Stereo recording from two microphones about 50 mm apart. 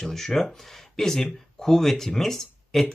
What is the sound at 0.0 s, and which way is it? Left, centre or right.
Speech, centre.